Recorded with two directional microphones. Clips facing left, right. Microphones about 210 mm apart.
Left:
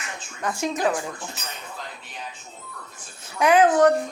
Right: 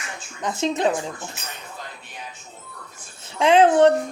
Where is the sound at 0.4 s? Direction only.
25° right (ahead or behind).